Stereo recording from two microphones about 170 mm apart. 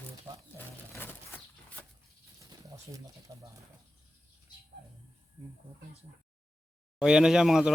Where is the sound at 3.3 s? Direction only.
25° right (ahead or behind).